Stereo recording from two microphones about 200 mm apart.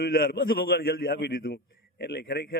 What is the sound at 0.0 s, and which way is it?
A man's voice, 50° left (ahead or behind).